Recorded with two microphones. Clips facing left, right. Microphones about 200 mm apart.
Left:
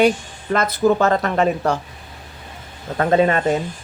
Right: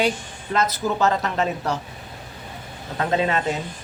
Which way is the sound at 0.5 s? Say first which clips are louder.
Left 6 dB; 55° left (ahead or behind).